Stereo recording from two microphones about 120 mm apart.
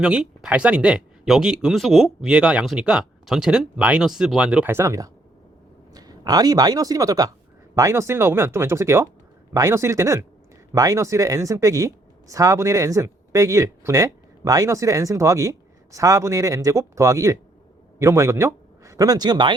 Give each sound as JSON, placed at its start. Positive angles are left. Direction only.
{"t": 0.0, "sound": "speech", "side_deg": -5}
{"t": 4.7, "sound": "speech", "side_deg": -25}